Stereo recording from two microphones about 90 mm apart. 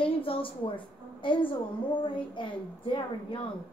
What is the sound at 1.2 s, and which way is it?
A woman's voice, 65° left (ahead or behind).